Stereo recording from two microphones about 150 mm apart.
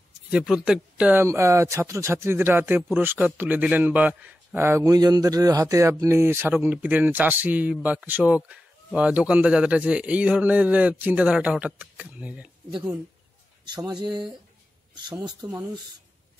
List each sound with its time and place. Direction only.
0.3 s speech: 5° right (ahead or behind)
13.7 s speech: 30° right (ahead or behind)